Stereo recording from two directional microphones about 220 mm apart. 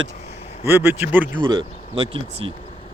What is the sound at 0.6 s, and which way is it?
Speech, 10° right (ahead or behind).